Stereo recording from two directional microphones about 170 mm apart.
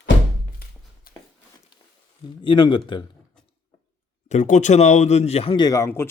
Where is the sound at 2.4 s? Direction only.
30° left (ahead or behind).